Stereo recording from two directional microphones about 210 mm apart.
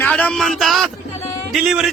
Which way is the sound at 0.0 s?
5° left (ahead or behind).